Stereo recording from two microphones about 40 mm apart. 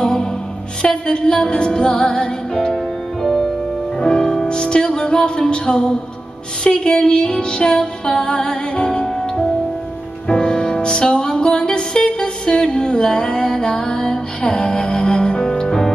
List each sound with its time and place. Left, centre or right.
0.0 s music: left
2.7 s music: centre
10.2 s music: centre